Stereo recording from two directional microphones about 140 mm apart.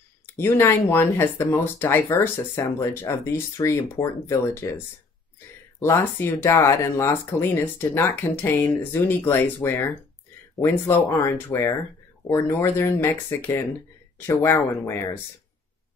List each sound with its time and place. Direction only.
0.4 s speech: 15° left (ahead or behind)